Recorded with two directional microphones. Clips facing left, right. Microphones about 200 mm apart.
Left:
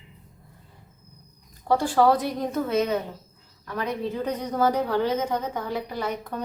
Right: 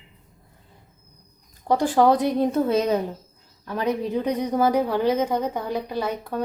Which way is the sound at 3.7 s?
20° right (ahead or behind).